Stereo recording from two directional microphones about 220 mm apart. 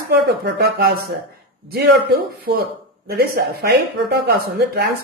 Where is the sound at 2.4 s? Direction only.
45° right (ahead or behind).